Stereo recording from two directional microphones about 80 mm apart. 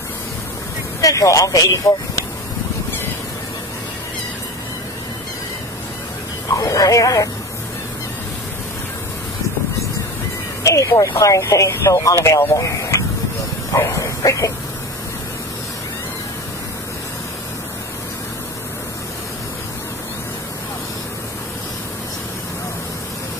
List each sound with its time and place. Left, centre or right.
1.0 s speech: left
6.5 s speech: left
10.6 s speech: left